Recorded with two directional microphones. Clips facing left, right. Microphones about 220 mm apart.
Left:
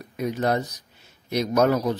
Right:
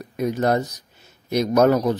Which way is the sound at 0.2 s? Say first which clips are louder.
Right 3 dB; 45° right (ahead or behind).